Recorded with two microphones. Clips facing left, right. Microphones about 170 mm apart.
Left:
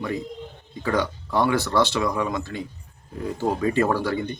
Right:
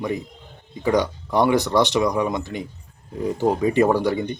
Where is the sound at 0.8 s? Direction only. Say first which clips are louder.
Right 4 dB; 15° right (ahead or behind).